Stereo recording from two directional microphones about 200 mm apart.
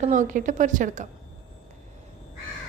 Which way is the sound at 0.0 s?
40° right (ahead or behind).